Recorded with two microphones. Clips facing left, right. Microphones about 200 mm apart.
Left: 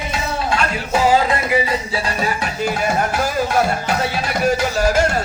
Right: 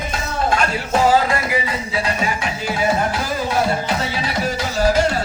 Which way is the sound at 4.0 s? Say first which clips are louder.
Left 2 dB; 55° left (ahead or behind).